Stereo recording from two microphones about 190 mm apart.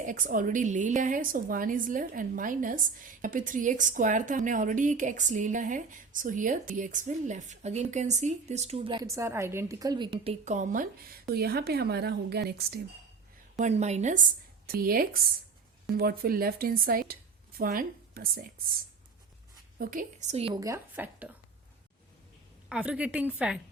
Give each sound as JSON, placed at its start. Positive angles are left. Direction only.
{"t": 0.0, "sound": "a woman's voice", "side_deg": -45}
{"t": 11.3, "sound": "a woman's voice", "side_deg": -55}
{"t": 13.6, "sound": "a woman's voice", "side_deg": -35}
{"t": 19.8, "sound": "speech", "side_deg": -45}
{"t": 20.5, "sound": "a woman's voice", "side_deg": -15}
{"t": 22.7, "sound": "a woman's voice", "side_deg": -5}